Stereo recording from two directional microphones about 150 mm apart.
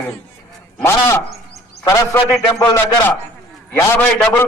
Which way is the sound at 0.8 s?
15° left (ahead or behind).